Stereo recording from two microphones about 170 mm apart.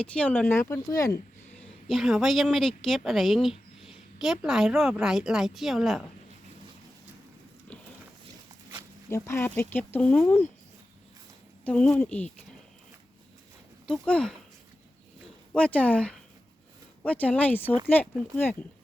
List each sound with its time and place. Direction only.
0.0 s speech: 5° left (ahead or behind)
1.9 s a woman's voice: centre (ahead or behind)
9.0 s speech: 15° left (ahead or behind)
11.6 s speech: 5° left (ahead or behind)
13.8 s speech: 5° left (ahead or behind)
15.5 s speech: 5° left (ahead or behind)